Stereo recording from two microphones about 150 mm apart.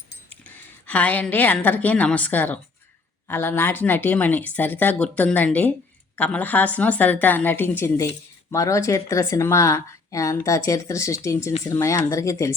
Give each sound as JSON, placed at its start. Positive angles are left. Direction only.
{"t": 0.4, "sound": "a woman's voice", "side_deg": 10}